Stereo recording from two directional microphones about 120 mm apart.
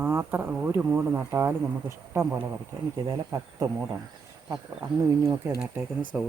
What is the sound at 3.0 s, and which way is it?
Speech, 30° right (ahead or behind).